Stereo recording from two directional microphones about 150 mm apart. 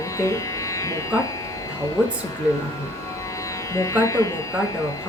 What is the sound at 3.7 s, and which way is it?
Speech, 20° left (ahead or behind).